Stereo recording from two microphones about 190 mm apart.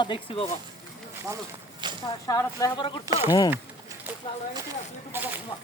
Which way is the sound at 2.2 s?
15° left (ahead or behind).